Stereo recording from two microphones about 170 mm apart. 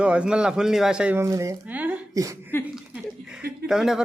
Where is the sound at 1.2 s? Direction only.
20° right (ahead or behind).